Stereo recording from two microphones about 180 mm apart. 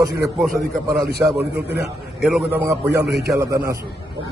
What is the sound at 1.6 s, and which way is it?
Speech, 70° right (ahead or behind).